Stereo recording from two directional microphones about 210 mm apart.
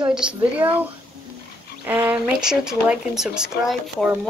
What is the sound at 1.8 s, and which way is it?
Speech, 10° right (ahead or behind).